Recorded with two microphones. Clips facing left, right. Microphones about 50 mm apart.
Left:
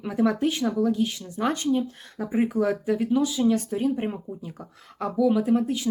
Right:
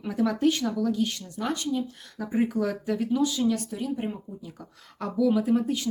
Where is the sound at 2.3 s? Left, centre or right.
Centre.